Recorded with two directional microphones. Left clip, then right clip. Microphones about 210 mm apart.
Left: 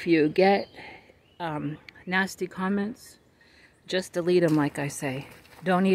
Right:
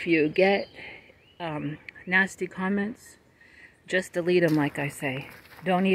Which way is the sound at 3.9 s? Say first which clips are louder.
Even; 10° left (ahead or behind).